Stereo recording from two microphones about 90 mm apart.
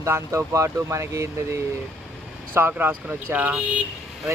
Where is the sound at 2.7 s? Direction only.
15° right (ahead or behind).